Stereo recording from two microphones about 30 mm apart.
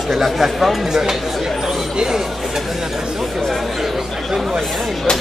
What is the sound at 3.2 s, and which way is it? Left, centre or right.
Chatter, centre.